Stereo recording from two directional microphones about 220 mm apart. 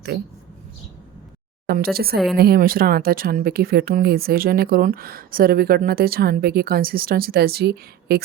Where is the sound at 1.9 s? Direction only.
45° right (ahead or behind).